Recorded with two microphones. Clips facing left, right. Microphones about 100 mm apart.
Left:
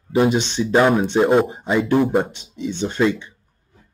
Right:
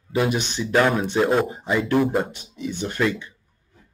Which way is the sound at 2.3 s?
25° left (ahead or behind).